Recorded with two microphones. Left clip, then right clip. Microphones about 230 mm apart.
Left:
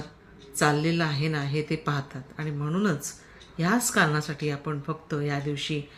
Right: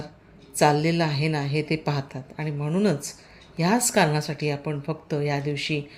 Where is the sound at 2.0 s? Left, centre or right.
Centre.